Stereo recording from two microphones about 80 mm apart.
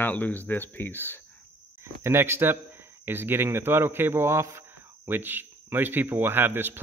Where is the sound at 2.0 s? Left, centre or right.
Right.